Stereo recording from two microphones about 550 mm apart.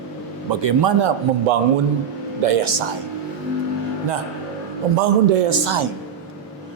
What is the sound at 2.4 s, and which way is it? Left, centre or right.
Speech, right.